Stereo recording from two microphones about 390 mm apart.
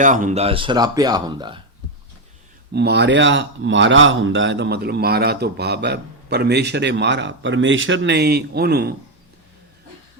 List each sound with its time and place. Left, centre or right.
0.0 s speech: centre
2.7 s speech: right